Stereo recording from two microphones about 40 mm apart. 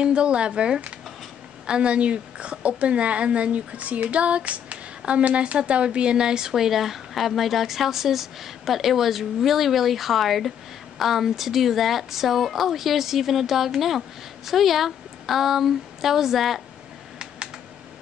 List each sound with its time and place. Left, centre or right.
0.0 s a woman's voice: right; by 16.6 s centre